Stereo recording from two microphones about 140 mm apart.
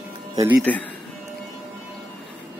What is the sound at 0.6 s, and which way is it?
Speech, 10° left (ahead or behind).